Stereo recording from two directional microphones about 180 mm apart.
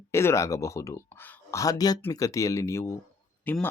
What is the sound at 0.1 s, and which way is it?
Speech, 15° left (ahead or behind).